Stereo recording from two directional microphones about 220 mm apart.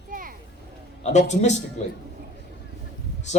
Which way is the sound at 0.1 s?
40° right (ahead or behind).